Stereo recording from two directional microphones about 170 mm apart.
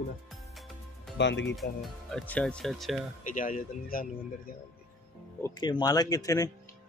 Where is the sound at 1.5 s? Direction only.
Centre (ahead or behind).